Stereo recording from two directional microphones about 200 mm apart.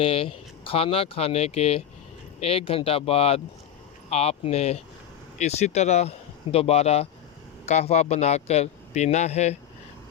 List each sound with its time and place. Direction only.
0.0 s a man's voice: 30° left (ahead or behind)